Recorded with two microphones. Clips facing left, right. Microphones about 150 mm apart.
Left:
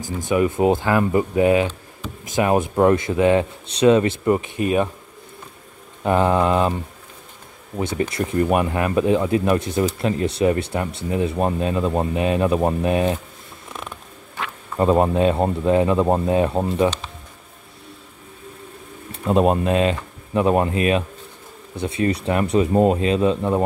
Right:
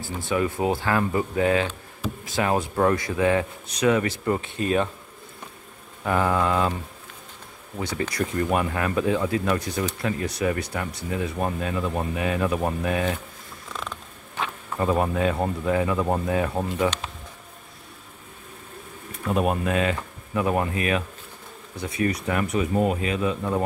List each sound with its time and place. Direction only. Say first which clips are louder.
0.2 s speech: left 6 dB; 15° left (ahead or behind)
6.0 s speech: left 5 dB; 25° left (ahead or behind)
7.7 s speech: left 5 dB; 25° left (ahead or behind)
13.7 s creak: even; 20° left (ahead or behind)
14.8 s speech: left 6 dB; 25° left (ahead or behind)
19.1 s speech: left 6 dB; 25° left (ahead or behind)